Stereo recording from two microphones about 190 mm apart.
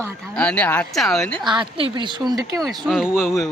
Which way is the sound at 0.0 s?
5° left (ahead or behind).